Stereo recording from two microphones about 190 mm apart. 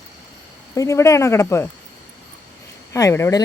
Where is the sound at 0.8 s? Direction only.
15° left (ahead or behind).